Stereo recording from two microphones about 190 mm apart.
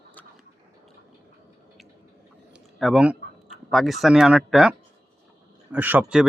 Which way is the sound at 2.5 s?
Centre (ahead or behind).